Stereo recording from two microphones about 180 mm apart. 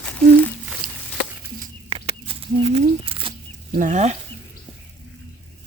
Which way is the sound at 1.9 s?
30° right (ahead or behind).